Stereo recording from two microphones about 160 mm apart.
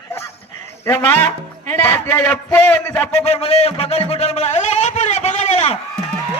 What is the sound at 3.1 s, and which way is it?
A man's voice, 40° left (ahead or behind).